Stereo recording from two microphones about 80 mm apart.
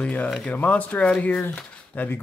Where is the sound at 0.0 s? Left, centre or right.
Centre.